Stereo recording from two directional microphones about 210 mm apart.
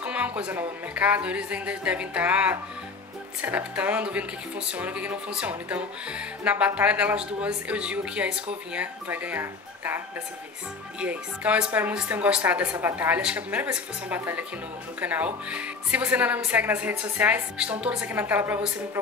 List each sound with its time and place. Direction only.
0.0 s a woman's voice: 5° right (ahead or behind)
11.0 s a woman's voice: 5° right (ahead or behind)